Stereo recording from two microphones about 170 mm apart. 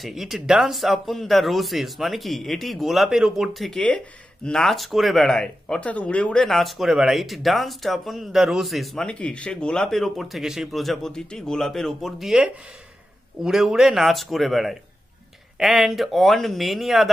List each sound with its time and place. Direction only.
0.0 s speech: centre (ahead or behind)